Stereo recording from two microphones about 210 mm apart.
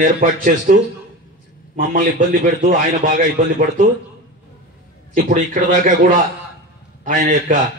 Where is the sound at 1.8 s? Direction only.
40° right (ahead or behind).